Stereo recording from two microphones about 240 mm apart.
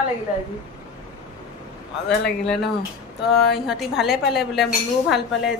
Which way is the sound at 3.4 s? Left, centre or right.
Centre.